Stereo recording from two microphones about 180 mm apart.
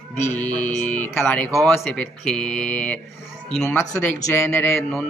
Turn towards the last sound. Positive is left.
turn(degrees=15)  # may be behind; listen again after turning